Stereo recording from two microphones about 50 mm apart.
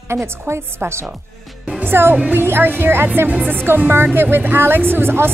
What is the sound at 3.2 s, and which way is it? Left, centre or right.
Speech, right.